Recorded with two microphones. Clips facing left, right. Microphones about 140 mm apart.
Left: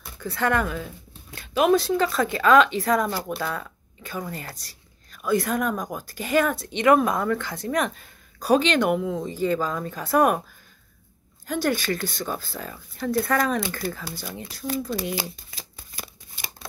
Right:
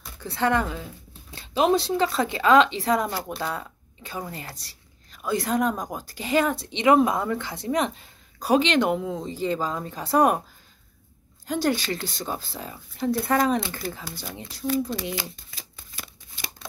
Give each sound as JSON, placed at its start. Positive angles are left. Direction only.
{"t": 0.2, "sound": "speech", "side_deg": -25}
{"t": 11.4, "sound": "speech", "side_deg": -25}
{"t": 15.1, "sound": "shuffling cards", "side_deg": 40}